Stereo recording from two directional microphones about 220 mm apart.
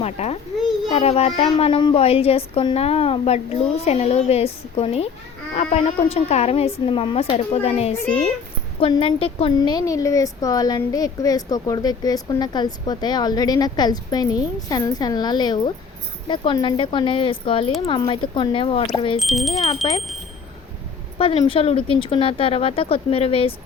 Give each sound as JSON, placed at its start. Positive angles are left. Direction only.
{"t": 0.0, "sound": "speech", "side_deg": 30}
{"t": 19.2, "sound": "speech", "side_deg": 0}
{"t": 19.8, "sound": "speech", "side_deg": 25}
{"t": 21.2, "sound": "speech", "side_deg": 25}